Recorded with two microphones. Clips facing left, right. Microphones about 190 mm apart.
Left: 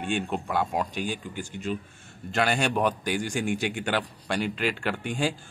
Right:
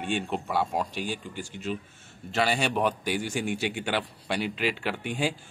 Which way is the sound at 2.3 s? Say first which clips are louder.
Left 1 dB; centre (ahead or behind).